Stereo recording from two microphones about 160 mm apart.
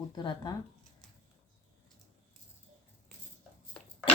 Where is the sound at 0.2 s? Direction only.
25° left (ahead or behind).